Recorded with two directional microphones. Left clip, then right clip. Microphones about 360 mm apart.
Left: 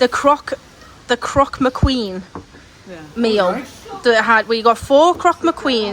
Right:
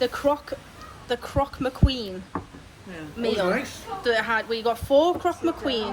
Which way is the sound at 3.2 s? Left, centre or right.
Centre.